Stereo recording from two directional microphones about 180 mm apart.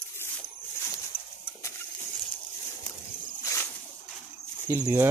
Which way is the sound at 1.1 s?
10° right (ahead or behind).